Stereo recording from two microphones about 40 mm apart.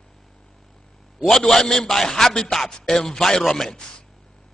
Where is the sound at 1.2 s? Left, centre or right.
Centre.